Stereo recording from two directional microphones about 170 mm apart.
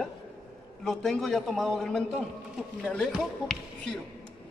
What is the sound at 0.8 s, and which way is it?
A man's voice, centre (ahead or behind).